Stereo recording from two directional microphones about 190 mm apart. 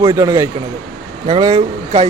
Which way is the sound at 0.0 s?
20° right (ahead or behind).